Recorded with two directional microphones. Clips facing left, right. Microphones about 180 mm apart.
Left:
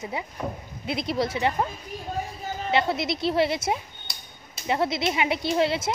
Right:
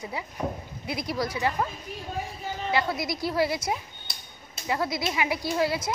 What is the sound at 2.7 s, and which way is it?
Speech, 25° left (ahead or behind).